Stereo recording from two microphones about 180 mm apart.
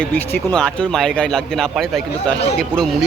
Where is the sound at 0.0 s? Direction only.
5° left (ahead or behind).